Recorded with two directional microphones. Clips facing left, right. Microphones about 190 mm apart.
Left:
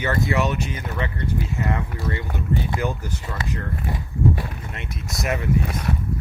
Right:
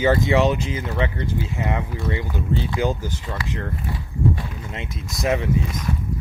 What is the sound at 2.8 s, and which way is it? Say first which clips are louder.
Speech: right 4 dB; 90° right.